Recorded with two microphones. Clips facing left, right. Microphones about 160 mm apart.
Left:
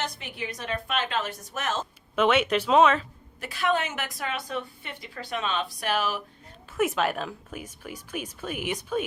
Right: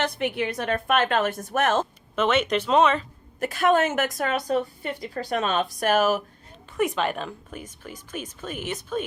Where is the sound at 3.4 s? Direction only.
45° right (ahead or behind).